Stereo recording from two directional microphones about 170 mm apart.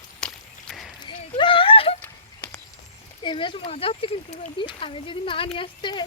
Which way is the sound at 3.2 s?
30° left (ahead or behind).